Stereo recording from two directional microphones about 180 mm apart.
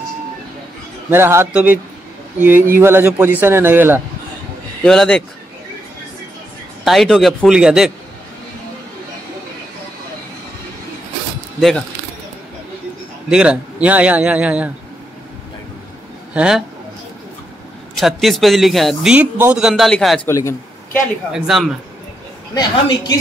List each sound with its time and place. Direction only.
1.1 s a man's voice: 15° right (ahead or behind)
4.8 s speech: 5° left (ahead or behind)
6.8 s speech: centre (ahead or behind)
13.3 s a man's voice: 5° right (ahead or behind)
16.3 s speech: 5° right (ahead or behind)
17.9 s speech: centre (ahead or behind)
20.2 s speech: 15° left (ahead or behind)
21.3 s speech: centre (ahead or behind)
22.5 s a woman's voice: 20° left (ahead or behind)